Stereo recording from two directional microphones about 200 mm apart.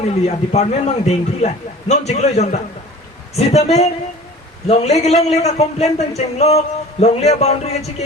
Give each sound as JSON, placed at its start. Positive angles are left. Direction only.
{"t": 0.0, "sound": "a man's voice", "side_deg": 30}